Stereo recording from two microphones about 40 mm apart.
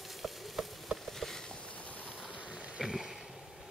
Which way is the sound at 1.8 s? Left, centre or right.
Left.